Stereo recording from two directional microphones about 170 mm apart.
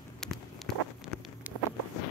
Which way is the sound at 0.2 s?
Centre (ahead or behind).